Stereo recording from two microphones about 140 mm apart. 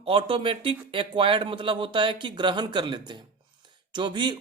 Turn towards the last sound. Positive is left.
turn(degrees=-35)  # may be behind; listen again after turning